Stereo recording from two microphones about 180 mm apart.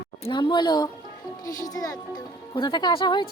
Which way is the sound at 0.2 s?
25° left (ahead or behind).